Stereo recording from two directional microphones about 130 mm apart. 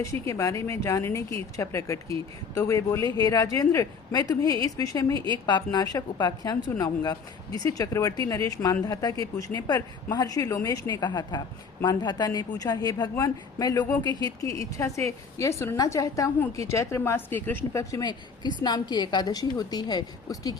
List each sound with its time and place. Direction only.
0.0 s a woman's voice: 25° left (ahead or behind)
5.1 s a woman's voice: 35° right (ahead or behind)
5.5 s a woman's voice: 35° left (ahead or behind)